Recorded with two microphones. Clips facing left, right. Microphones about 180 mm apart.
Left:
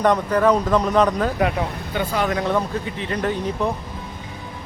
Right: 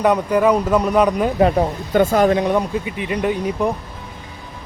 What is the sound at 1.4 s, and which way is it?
Speech, 35° right (ahead or behind).